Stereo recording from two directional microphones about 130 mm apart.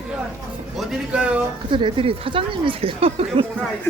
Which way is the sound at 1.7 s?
40° right (ahead or behind).